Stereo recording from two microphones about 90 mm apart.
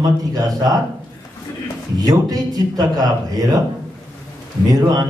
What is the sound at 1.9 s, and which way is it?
A man's voice, 45° right (ahead or behind).